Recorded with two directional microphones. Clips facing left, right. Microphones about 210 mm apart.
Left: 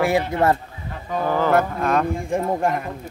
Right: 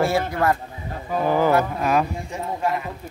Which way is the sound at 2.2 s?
50° left (ahead or behind).